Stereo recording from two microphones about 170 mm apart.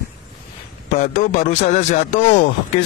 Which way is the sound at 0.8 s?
50° left (ahead or behind).